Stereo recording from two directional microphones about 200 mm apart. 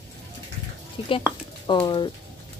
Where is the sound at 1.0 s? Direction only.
30° left (ahead or behind).